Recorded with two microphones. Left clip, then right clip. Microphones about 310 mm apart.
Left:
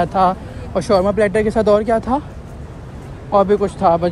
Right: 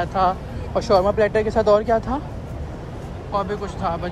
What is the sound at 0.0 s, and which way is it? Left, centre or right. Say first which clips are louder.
Speech: left 5 dB; centre.